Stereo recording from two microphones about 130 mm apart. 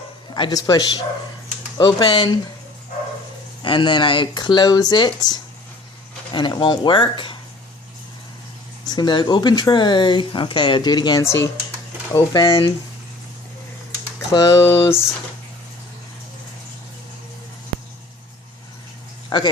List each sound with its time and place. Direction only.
0.3 s a man's voice: 35° left (ahead or behind)
3.6 s speech: 40° left (ahead or behind)
8.9 s speech: 35° left (ahead or behind)
11.2 s a man's voice: 20° left (ahead or behind)
12.3 s speech: 35° left (ahead or behind)
14.3 s a man's voice: 20° left (ahead or behind)
19.3 s a man's voice: 30° left (ahead or behind)